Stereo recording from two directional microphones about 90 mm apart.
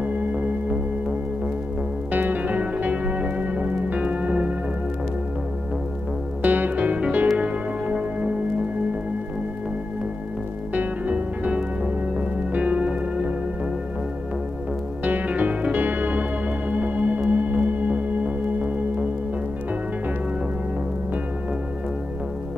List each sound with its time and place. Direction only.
0.0 s music: 15° right (ahead or behind)
2.1 s music: 20° right (ahead or behind)
6.4 s music: 20° right (ahead or behind)
10.7 s music: 15° right (ahead or behind)
15.0 s music: 15° right (ahead or behind)